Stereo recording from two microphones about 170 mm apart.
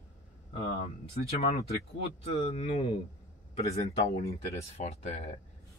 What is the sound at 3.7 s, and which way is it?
Speech, 40° left (ahead or behind).